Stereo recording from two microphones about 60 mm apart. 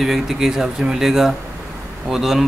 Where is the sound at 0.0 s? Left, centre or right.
Centre.